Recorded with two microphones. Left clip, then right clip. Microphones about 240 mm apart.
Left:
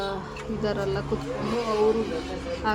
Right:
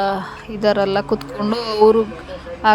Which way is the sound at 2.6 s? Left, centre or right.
Right.